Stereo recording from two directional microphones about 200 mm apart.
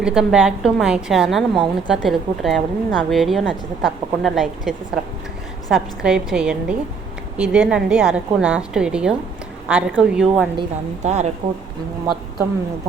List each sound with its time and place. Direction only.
0.0 s a woman's voice: 5° right (ahead or behind)
10.6 s a woman's voice: 35° right (ahead or behind)